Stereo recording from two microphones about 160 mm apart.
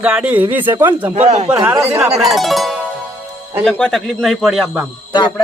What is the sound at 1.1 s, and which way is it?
Speech, 45° right (ahead or behind).